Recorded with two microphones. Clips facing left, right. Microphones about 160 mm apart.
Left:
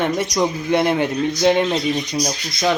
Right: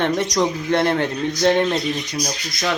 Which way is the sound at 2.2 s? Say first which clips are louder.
Left 4 dB; 25° left (ahead or behind).